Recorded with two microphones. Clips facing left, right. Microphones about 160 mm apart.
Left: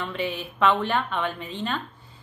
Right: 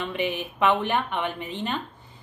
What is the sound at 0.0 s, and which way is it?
Speech, 20° right (ahead or behind).